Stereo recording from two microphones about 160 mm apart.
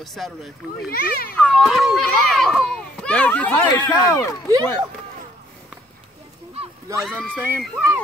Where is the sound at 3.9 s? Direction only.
20° left (ahead or behind).